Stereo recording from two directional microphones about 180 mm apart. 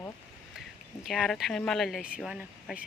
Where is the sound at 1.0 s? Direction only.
Centre (ahead or behind).